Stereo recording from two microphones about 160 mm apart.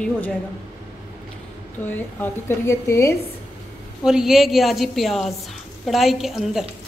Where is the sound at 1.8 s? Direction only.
15° left (ahead or behind).